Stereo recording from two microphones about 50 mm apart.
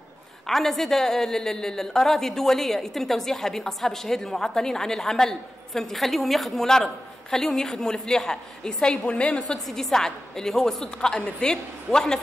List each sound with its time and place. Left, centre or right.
0.5 s a woman's voice: centre
9.7 s a woman's voice: centre